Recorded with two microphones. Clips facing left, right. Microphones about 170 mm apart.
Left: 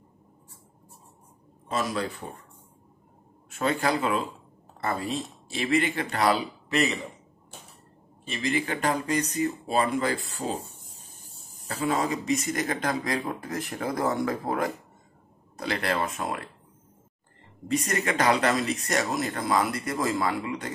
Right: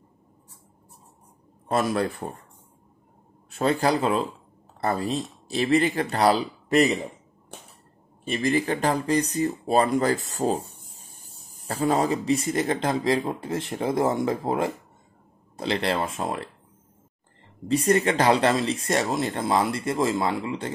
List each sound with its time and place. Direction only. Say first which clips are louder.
1.7 s speech: right 5 dB; 55° right (ahead or behind)
3.4 s a man's voice: right 4 dB; 35° right (ahead or behind)
8.4 s speech: right 4 dB; 40° right (ahead or behind)
11.6 s speech: right 4 dB; 35° right (ahead or behind)
17.6 s speech: right 6 dB; 30° right (ahead or behind)